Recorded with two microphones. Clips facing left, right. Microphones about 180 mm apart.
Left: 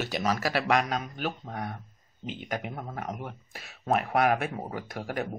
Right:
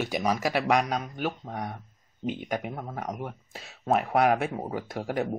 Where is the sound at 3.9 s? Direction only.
20° right (ahead or behind).